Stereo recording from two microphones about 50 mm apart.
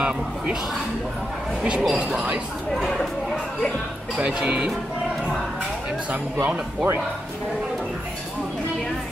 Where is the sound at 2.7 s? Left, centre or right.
Centre.